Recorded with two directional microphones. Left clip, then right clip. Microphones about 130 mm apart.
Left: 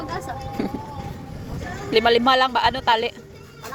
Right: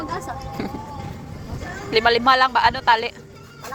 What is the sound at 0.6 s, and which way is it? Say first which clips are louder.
Boat: left 3 dB; 85° left.